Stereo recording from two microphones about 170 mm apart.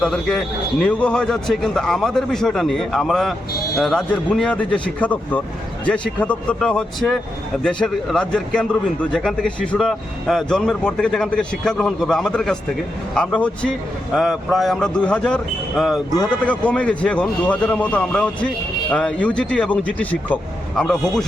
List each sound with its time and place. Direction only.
0.0 s a man's voice: 5° left (ahead or behind)